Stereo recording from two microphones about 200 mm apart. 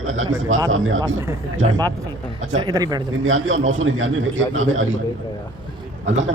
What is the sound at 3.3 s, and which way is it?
Speech, 75° right (ahead or behind).